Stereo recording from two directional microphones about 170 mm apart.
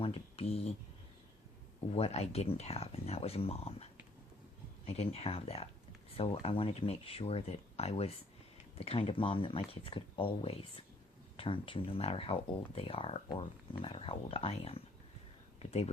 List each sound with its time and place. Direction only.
0.0 s speech: 35° left (ahead or behind)
1.9 s speech: 35° left (ahead or behind)
4.9 s speech: 35° left (ahead or behind)